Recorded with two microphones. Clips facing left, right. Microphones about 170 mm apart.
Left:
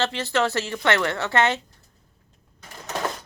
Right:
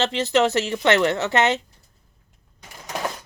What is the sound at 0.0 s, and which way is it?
A woman's voice, 20° right (ahead or behind).